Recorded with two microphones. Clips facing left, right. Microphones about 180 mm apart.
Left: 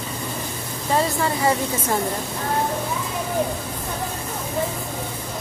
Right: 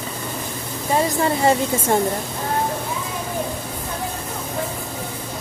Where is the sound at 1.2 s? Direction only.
25° right (ahead or behind).